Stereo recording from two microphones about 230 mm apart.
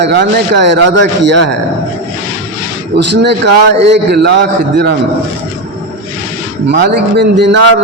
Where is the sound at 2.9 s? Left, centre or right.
Right.